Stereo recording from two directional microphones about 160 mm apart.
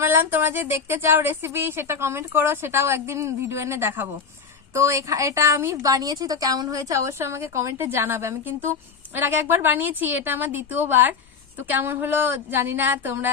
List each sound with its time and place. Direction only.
0.0 s speech: 15° right (ahead or behind)